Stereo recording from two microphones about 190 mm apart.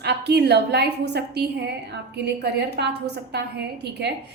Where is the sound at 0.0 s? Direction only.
60° right (ahead or behind).